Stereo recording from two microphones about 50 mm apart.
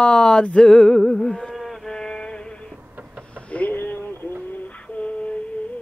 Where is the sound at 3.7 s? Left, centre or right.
Left.